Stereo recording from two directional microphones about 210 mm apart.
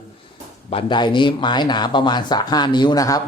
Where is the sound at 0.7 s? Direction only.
20° left (ahead or behind).